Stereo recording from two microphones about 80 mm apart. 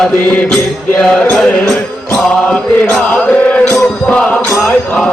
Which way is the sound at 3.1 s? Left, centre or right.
Centre.